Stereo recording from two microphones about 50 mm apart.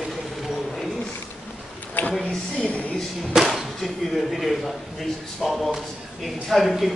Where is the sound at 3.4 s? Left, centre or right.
Centre.